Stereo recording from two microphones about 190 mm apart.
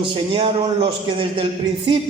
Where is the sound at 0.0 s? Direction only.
25° right (ahead or behind).